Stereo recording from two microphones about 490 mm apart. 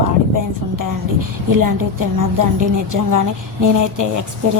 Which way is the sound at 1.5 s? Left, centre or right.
Right.